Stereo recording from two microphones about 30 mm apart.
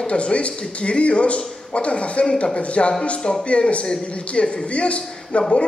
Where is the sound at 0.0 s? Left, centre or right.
Left.